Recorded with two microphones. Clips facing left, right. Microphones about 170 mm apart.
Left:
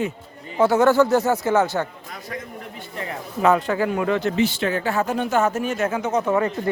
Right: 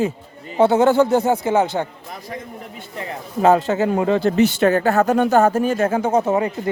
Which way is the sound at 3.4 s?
25° right (ahead or behind).